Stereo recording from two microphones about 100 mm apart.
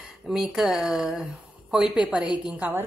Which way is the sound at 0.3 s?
5° right (ahead or behind).